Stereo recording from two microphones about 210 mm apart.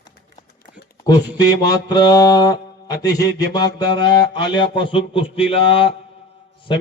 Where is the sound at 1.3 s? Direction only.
20° left (ahead or behind).